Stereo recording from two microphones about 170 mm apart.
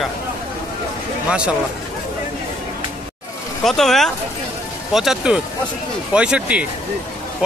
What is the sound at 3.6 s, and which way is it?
Speech, centre (ahead or behind).